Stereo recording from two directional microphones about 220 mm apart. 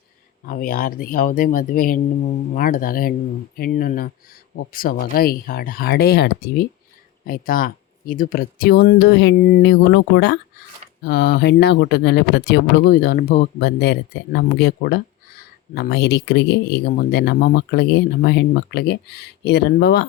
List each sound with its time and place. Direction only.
0.4 s speech: 40° left (ahead or behind)
11.0 s speech: 45° left (ahead or behind)